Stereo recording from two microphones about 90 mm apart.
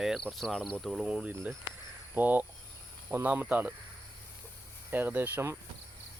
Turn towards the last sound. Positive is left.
turn(degrees=-20)  # may be behind; listen again after turning